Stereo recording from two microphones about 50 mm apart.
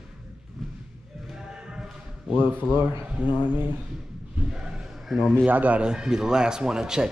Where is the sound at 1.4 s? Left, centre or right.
Centre.